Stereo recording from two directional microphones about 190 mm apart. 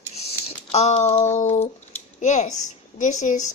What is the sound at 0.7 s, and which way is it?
A woman's voice, 35° left (ahead or behind).